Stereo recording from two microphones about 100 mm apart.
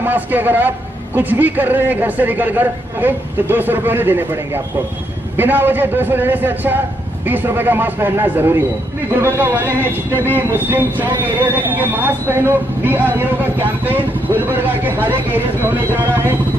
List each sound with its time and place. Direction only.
0.0 s speech: 20° right (ahead or behind)
5.4 s speech: 20° right (ahead or behind)